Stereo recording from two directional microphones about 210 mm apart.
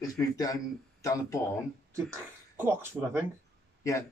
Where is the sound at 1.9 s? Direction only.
10° right (ahead or behind).